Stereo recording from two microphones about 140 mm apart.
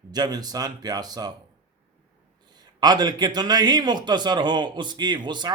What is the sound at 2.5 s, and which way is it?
A man's voice, 30° right (ahead or behind).